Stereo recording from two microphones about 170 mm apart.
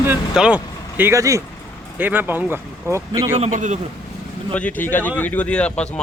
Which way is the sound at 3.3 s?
40° right (ahead or behind).